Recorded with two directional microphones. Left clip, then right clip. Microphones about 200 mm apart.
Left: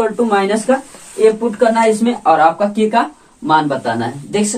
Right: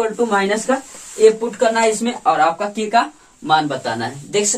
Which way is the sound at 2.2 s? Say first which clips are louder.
Left 4 dB; 10° left (ahead or behind).